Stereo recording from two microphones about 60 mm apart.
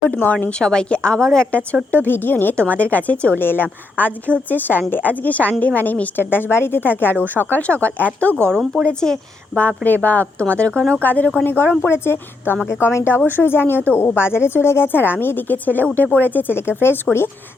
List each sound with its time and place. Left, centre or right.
0.1 s speech: left
0.6 s a woman's voice: centre
1.5 s speech: left
3.3 s speech: left
8.9 s a woman's voice: centre
9.6 s speech: left
11.0 s speech: left